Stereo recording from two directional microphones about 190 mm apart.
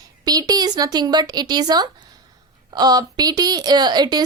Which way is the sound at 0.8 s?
20° right (ahead or behind).